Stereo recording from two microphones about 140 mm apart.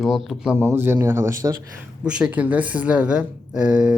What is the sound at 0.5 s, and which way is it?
Speech, 20° right (ahead or behind).